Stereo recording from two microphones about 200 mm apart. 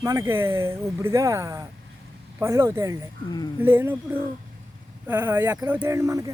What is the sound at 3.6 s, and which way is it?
Speech, 10° right (ahead or behind).